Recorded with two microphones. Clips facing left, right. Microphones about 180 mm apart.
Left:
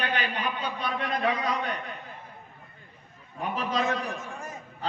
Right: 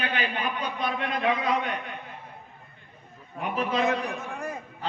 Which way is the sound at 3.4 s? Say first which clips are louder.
Right 2 dB; 35° left (ahead or behind).